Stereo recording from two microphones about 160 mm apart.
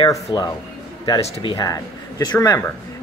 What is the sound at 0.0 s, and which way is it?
Speech, 25° left (ahead or behind).